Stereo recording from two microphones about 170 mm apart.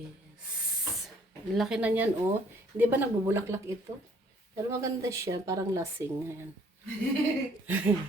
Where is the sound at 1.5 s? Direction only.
5° right (ahead or behind).